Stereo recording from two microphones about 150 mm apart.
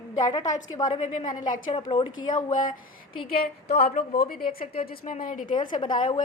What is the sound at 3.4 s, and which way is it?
A woman's voice, 90° left.